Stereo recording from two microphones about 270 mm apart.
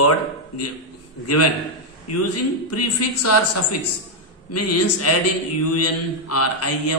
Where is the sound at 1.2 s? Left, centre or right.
Left.